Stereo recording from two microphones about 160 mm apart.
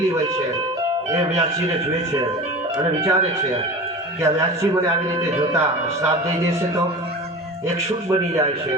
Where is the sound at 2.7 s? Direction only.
25° right (ahead or behind).